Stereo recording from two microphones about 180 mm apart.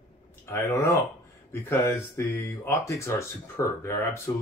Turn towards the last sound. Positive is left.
turn(degrees=15)  # may be behind; listen again after turning